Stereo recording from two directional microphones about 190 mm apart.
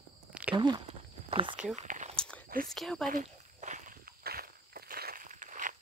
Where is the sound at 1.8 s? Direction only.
40° right (ahead or behind).